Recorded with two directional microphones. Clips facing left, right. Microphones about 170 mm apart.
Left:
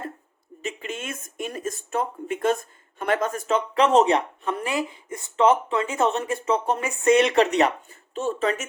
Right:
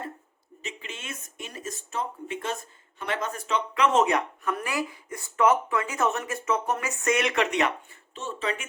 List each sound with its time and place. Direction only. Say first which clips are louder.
0.6 s speech: left 8 dB; 50° left (ahead or behind)